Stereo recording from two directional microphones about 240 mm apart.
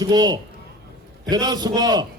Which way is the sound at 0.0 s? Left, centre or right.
Centre.